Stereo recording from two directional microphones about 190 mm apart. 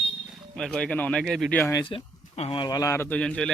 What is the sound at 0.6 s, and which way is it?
Speech, 5° left (ahead or behind).